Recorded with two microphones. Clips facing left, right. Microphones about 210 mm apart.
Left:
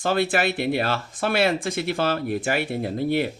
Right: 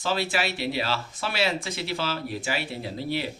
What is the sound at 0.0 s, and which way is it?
Speech, 55° left (ahead or behind).